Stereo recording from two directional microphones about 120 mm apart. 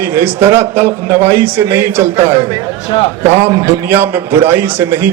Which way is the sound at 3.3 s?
65° right (ahead or behind).